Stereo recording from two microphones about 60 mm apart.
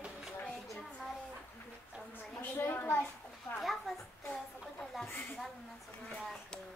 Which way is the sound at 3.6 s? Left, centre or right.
Centre.